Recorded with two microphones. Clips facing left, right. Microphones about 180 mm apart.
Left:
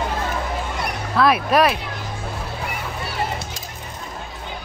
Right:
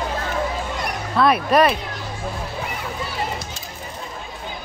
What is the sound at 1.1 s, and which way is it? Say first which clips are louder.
Speech: right 1 dB; centre (ahead or behind).